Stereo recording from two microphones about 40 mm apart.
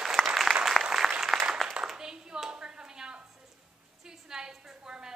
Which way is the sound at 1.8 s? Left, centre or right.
Centre.